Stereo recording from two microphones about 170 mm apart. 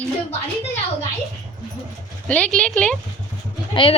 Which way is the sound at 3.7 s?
30° left (ahead or behind).